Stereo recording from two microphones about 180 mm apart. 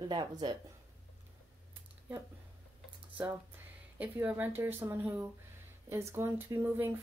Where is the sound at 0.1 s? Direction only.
25° right (ahead or behind).